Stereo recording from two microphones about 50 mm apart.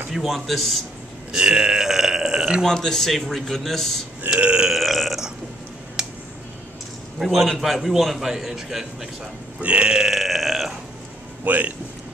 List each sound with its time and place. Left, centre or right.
0.1 s a man's voice: centre
1.3 s speech: centre
2.6 s a man's voice: centre
4.4 s burping: right
4.6 s burping: centre
6.0 s music: centre
7.2 s a man's voice: centre
9.6 s burping: right
10.0 s burping: centre
11.4 s speech: right